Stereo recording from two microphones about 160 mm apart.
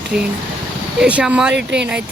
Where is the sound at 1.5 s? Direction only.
90° right.